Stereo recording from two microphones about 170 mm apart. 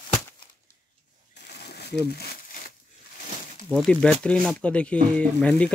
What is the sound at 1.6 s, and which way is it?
Crumpling, 75° left (ahead or behind).